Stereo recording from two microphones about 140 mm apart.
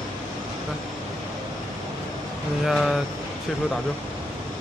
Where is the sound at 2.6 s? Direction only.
Centre (ahead or behind).